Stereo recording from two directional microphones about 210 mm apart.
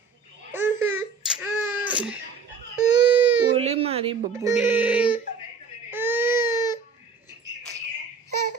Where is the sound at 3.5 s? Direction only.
30° right (ahead or behind).